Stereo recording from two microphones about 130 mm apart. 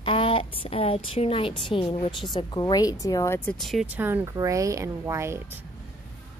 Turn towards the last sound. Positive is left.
turn(degrees=-20)  # may be behind; listen again after turning